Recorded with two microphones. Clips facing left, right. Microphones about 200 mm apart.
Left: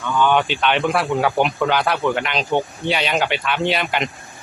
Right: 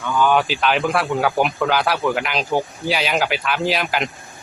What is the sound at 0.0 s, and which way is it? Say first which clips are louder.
A man's voice: even; 5° right (ahead or behind).